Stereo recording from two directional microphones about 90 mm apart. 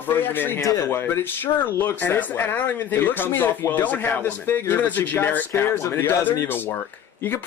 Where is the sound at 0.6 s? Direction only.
35° left (ahead or behind).